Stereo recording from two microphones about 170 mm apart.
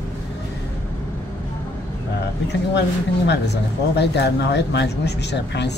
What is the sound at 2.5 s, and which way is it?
Speech, 90° left.